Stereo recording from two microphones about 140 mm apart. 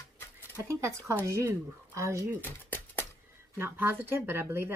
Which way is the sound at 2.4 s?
15° left (ahead or behind).